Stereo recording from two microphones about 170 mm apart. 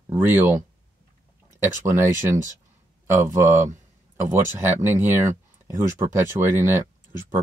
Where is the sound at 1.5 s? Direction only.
15° right (ahead or behind).